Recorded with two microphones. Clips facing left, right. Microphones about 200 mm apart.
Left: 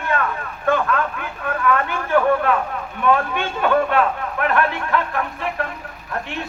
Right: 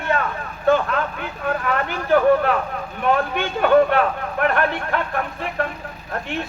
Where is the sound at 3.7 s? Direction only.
35° right (ahead or behind).